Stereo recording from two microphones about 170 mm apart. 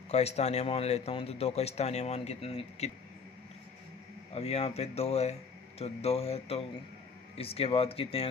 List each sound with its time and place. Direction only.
0.1 s a man's voice: 40° left (ahead or behind)
4.4 s a man's voice: 35° left (ahead or behind)